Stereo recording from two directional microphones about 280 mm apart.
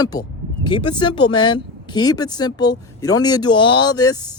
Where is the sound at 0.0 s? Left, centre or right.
Centre.